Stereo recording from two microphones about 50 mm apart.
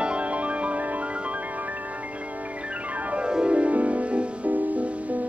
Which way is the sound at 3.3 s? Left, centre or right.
Centre.